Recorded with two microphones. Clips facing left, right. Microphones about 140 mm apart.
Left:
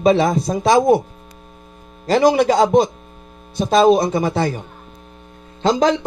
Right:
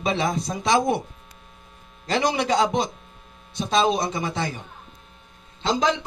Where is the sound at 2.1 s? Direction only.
50° left (ahead or behind).